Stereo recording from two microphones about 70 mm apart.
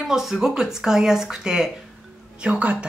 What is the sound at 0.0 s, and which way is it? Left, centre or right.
Speech, centre.